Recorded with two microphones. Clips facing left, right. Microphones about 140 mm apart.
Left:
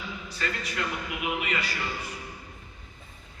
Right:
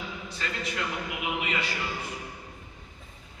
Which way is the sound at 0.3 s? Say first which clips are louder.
Left 1 dB; 20° right (ahead or behind).